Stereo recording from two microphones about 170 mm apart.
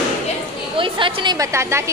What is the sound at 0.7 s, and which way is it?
A woman's voice, 30° right (ahead or behind).